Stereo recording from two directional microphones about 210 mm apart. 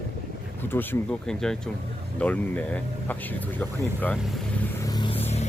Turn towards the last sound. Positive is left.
turn(degrees=30)  # may be behind; listen again after turning